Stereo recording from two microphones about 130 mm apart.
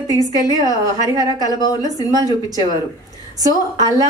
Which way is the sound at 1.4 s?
30° left (ahead or behind).